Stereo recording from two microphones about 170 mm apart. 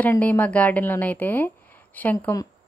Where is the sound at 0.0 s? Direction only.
10° left (ahead or behind).